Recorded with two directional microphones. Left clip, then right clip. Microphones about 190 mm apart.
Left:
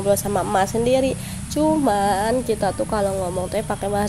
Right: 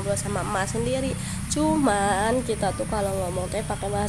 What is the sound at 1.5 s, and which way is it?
Speech, 10° left (ahead or behind).